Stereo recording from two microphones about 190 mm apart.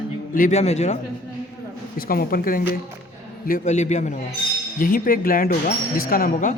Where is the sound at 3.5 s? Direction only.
35° left (ahead or behind).